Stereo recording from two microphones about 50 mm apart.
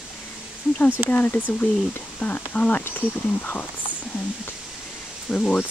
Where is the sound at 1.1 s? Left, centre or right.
Left.